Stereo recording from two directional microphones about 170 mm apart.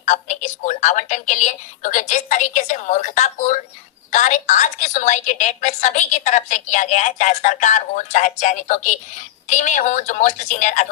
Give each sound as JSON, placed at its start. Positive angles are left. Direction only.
{"t": 0.0, "sound": "a woman's voice", "side_deg": 45}